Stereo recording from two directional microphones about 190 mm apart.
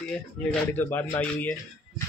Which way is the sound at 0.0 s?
5° left (ahead or behind).